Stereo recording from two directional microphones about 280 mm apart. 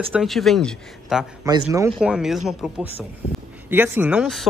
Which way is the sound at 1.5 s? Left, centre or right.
Centre.